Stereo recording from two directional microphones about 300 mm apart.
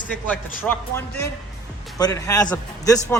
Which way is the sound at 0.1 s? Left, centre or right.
Centre.